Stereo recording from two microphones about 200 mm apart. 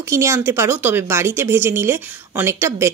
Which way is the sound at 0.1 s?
15° right (ahead or behind).